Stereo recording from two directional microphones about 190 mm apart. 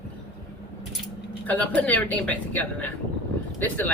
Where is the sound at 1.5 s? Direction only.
10° left (ahead or behind).